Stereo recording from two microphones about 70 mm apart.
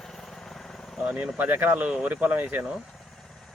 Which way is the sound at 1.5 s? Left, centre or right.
Right.